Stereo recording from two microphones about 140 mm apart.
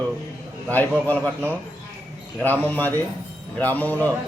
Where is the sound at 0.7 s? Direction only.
15° left (ahead or behind).